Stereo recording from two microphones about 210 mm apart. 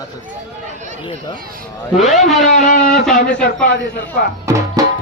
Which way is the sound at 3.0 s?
Centre (ahead or behind).